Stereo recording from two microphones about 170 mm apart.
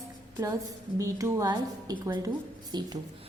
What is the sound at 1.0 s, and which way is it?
A woman's voice, 20° right (ahead or behind).